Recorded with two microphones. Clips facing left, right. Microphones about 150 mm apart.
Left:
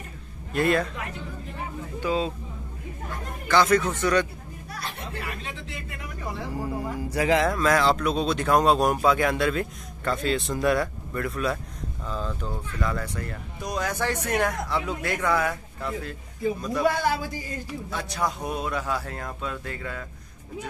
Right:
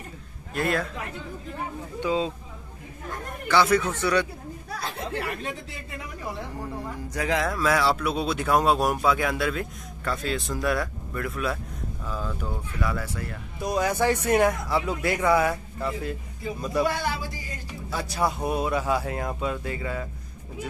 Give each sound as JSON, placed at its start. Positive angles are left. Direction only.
{"t": 0.6, "sound": "speech", "side_deg": 0}
{"t": 2.0, "sound": "speech", "side_deg": -15}
{"t": 3.4, "sound": "speech", "side_deg": -10}
{"t": 5.0, "sound": "a sound", "side_deg": -75}
{"t": 6.5, "sound": "speech", "side_deg": 10}
{"t": 17.9, "sound": "speech", "side_deg": -5}